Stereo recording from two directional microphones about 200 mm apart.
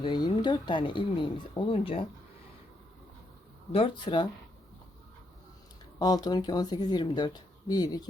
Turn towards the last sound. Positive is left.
turn(degrees=20)  # may be behind; listen again after turning